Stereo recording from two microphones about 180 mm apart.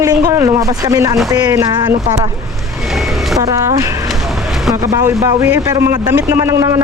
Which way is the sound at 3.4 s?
15° right (ahead or behind).